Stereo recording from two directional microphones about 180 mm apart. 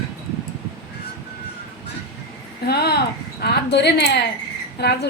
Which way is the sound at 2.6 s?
65° left (ahead or behind).